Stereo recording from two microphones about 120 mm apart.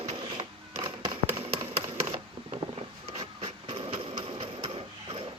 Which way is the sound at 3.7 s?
50° right (ahead or behind).